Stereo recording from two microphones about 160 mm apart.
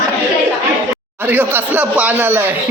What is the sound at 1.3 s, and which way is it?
Speech, 10° right (ahead or behind).